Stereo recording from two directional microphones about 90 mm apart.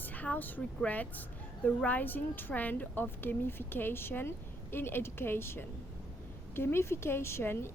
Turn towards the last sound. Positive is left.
turn(degrees=25)  # may be behind; listen again after turning